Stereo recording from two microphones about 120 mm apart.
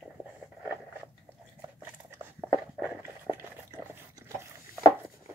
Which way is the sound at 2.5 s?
10° right (ahead or behind).